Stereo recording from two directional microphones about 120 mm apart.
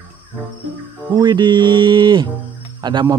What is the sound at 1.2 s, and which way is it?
Speech, 35° right (ahead or behind).